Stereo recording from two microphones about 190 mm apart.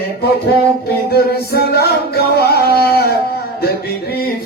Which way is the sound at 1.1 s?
55° left (ahead or behind).